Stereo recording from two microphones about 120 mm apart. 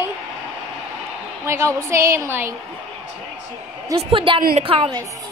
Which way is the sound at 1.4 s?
25° right (ahead or behind).